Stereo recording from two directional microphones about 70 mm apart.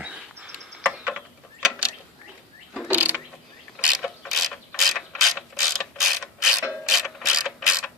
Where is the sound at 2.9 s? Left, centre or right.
Right.